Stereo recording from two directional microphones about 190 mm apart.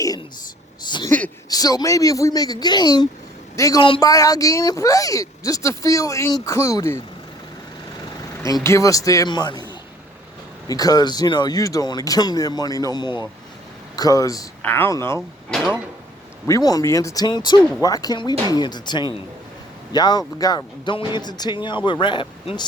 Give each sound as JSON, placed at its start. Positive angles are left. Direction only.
{"t": 0.9, "sound": "a sound", "side_deg": 25}
{"t": 1.5, "sound": "speech", "side_deg": 20}
{"t": 8.6, "sound": "speech", "side_deg": 15}
{"t": 15.4, "sound": "speech", "side_deg": 0}
{"t": 16.5, "sound": "speech", "side_deg": 20}